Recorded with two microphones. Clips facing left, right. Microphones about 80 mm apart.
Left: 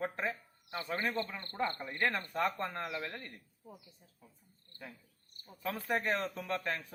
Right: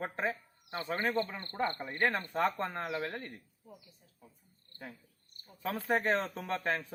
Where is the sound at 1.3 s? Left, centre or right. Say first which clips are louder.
Right 1 dB; right.